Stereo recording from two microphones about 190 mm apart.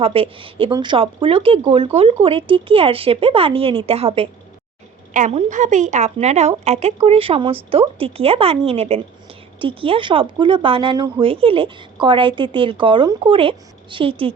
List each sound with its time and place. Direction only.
0.0 s speech: 30° right (ahead or behind)
5.1 s a woman's voice: 40° right (ahead or behind)